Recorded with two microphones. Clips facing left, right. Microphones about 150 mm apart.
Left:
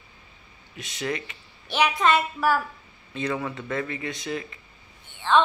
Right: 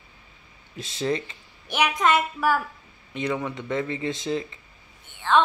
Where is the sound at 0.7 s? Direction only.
25° right (ahead or behind).